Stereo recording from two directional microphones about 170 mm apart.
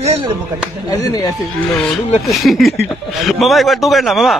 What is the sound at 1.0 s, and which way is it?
Speech, 20° left (ahead or behind).